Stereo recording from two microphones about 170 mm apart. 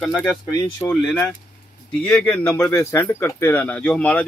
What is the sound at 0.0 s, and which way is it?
Speech, 5° left (ahead or behind).